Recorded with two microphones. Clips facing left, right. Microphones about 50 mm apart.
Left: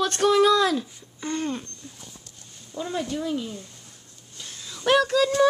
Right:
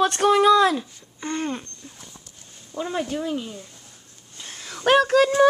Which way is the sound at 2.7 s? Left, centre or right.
Right.